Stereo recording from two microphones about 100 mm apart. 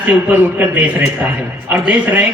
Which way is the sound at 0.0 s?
20° right (ahead or behind).